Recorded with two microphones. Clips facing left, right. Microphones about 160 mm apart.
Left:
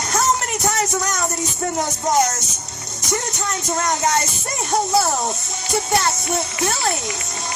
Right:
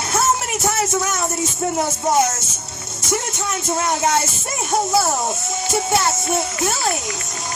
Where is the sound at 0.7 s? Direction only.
5° right (ahead or behind).